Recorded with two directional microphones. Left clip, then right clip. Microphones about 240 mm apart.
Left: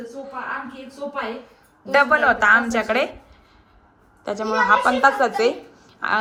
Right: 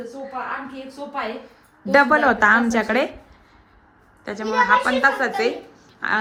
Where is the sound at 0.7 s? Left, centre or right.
Centre.